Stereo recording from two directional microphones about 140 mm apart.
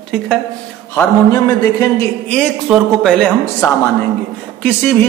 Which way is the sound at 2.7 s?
5° left (ahead or behind).